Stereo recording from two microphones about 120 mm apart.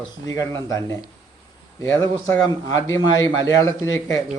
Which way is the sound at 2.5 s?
30° left (ahead or behind).